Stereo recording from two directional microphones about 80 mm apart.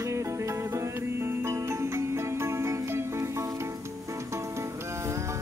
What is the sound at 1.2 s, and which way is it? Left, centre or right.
Music, right.